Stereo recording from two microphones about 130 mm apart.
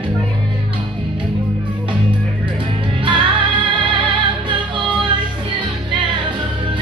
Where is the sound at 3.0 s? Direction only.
40° right (ahead or behind).